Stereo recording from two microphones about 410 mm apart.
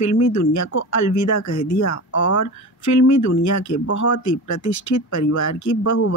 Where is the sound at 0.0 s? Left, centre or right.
Left.